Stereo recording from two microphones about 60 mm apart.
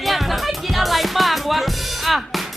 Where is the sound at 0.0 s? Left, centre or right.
Centre.